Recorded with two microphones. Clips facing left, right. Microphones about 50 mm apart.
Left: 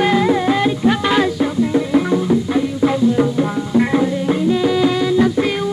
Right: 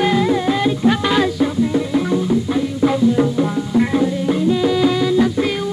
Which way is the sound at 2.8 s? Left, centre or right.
Centre.